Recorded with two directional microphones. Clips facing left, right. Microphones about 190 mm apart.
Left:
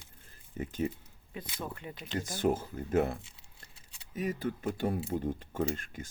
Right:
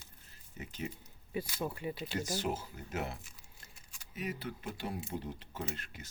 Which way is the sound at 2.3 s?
50° left (ahead or behind).